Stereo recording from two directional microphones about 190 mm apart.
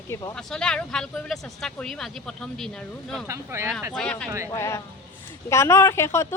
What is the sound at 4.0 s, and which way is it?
Speech, 5° left (ahead or behind).